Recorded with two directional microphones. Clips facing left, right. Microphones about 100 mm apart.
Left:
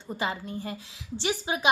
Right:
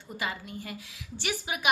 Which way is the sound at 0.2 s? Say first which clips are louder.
Left 3 dB; 30° left (ahead or behind).